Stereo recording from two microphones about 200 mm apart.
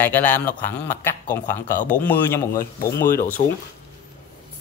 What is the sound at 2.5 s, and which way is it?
Speech, 45° left (ahead or behind).